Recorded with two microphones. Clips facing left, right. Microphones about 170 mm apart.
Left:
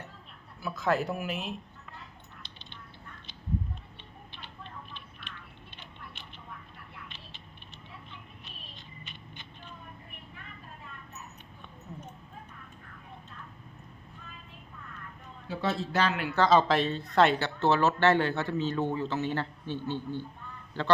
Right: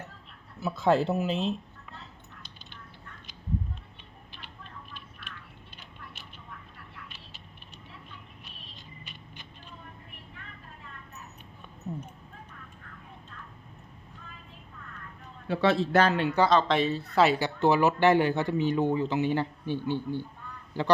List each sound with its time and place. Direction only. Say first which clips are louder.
0.6 s speech: right 5 dB; 25° right (ahead or behind)
15.4 s a man's voice: right 7 dB; 65° right (ahead or behind)
16.5 s speech: even; 5° left (ahead or behind)